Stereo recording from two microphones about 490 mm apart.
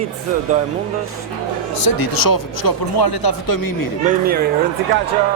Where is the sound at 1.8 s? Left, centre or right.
Left.